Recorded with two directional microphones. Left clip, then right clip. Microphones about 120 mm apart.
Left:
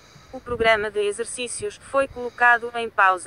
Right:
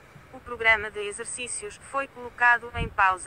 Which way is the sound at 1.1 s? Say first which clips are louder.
Left 7 dB; 50° left (ahead or behind).